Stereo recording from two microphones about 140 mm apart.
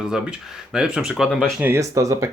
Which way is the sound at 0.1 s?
5° right (ahead or behind).